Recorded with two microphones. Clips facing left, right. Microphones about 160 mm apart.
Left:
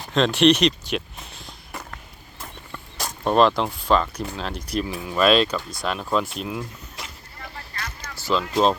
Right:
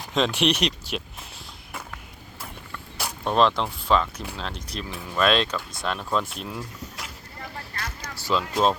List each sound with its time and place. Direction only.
0.1 s speech: 10° right (ahead or behind)
3.2 s speech: 5° left (ahead or behind)
8.3 s speech: 5° right (ahead or behind)